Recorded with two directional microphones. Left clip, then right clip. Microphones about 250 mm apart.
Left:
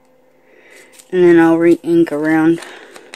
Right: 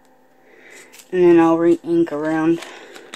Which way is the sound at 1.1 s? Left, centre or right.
Centre.